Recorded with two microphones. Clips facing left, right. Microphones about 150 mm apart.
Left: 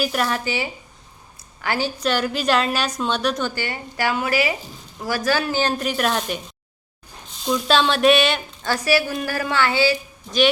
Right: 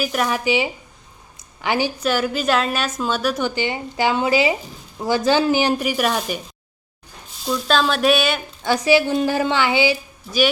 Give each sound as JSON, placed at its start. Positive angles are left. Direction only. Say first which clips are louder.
{"t": 0.0, "sound": "a woman's voice", "louder": "right 1 dB", "side_deg": 0}
{"t": 0.3, "sound": "speech", "louder": "right 5 dB", "side_deg": -15}
{"t": 1.4, "sound": "a sound", "louder": "right 3 dB", "side_deg": -20}
{"t": 2.0, "sound": "a woman's voice", "louder": "right 1 dB", "side_deg": -5}
{"t": 7.4, "sound": "a woman's voice", "louder": "even", "side_deg": 0}
{"t": 8.6, "sound": "a woman's voice", "louder": "right 4 dB", "side_deg": -15}